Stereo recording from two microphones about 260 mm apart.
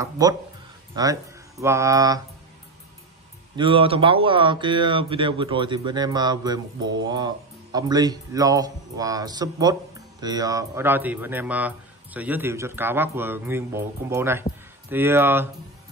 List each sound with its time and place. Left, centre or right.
0.0 s speech: centre
3.5 s speech: centre